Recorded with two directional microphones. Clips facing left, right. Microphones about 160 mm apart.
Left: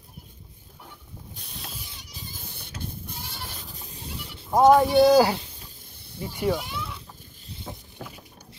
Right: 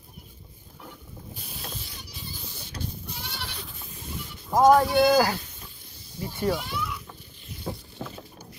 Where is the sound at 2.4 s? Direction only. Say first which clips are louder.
Right 2 dB; 55° left (ahead or behind).